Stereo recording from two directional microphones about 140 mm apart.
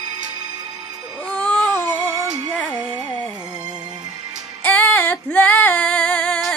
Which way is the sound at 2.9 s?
30° right (ahead or behind).